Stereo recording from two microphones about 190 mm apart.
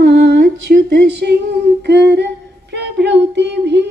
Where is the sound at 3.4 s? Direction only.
65° right (ahead or behind).